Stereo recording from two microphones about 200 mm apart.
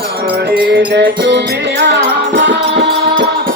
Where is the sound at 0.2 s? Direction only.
50° right (ahead or behind).